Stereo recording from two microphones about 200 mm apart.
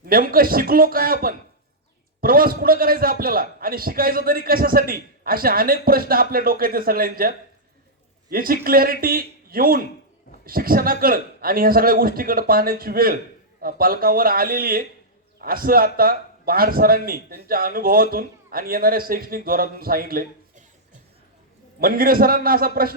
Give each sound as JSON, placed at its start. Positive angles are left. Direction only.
{"t": 0.0, "sound": "a man's voice", "side_deg": -45}
{"t": 21.8, "sound": "a man's voice", "side_deg": -45}